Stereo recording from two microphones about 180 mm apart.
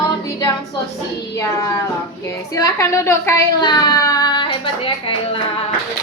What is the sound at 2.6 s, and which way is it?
Speech, 15° left (ahead or behind).